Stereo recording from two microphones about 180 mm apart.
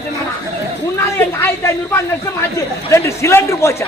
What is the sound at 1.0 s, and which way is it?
A man's voice, 15° left (ahead or behind).